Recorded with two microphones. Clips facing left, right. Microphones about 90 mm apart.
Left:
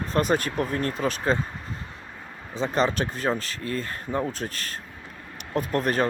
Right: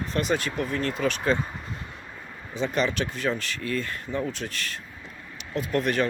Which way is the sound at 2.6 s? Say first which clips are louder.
Left 2 dB; 35° left (ahead or behind).